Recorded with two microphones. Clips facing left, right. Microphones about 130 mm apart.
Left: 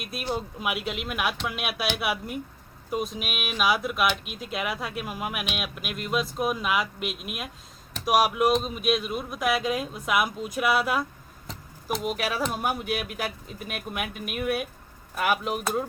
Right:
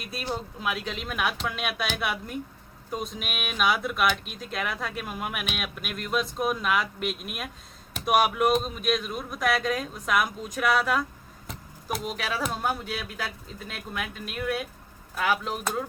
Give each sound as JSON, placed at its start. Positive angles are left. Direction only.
{"t": 0.2, "sound": "speech", "side_deg": 10}
{"t": 12.5, "sound": "speech", "side_deg": 15}